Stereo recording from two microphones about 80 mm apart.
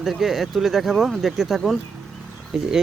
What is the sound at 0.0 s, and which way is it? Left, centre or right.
Speech, centre.